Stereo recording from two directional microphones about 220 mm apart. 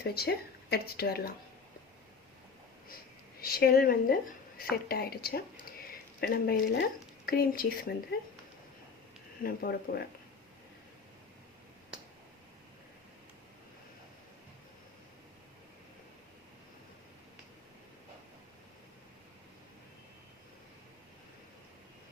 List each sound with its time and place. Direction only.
0.0 s speech: 45° left (ahead or behind)
3.4 s a woman's voice: 45° left (ahead or behind)
9.4 s speech: 45° left (ahead or behind)